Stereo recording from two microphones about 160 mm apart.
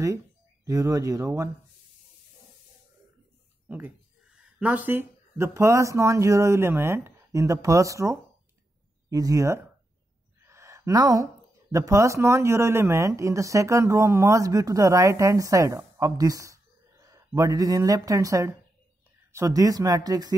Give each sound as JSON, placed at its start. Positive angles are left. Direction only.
{"t": 0.7, "sound": "speech", "side_deg": -20}
{"t": 3.6, "sound": "speech", "side_deg": -10}
{"t": 10.4, "sound": "a sound", "side_deg": -20}
{"t": 11.7, "sound": "speech", "side_deg": -20}